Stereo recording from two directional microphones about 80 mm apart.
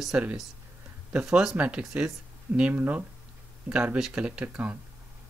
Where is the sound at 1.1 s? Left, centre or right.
Centre.